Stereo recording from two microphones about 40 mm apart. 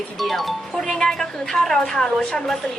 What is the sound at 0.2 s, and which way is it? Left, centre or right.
Speech, centre.